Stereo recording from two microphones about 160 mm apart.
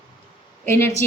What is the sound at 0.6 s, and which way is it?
Speech, 15° left (ahead or behind).